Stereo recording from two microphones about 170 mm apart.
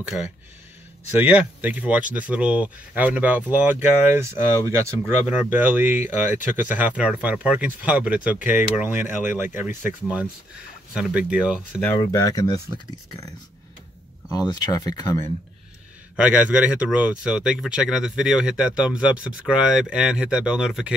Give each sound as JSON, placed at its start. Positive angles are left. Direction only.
{"t": 0.1, "sound": "speech", "side_deg": 0}
{"t": 12.0, "sound": "speech", "side_deg": 20}
{"t": 14.3, "sound": "speech", "side_deg": 20}
{"t": 16.2, "sound": "speech", "side_deg": -5}